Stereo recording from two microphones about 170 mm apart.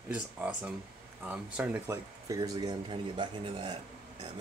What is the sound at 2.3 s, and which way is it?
Speech, 20° right (ahead or behind).